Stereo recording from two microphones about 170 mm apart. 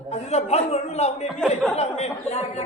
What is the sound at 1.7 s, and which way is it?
Chatter, 40° left (ahead or behind).